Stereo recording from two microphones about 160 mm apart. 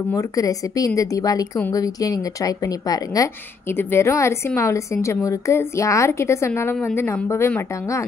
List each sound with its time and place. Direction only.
0.1 s a woman's voice: 20° left (ahead or behind)